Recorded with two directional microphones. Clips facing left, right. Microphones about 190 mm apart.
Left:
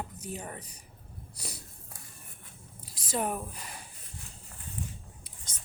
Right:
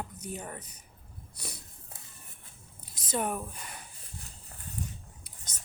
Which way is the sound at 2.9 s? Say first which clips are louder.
Even; 30° left (ahead or behind).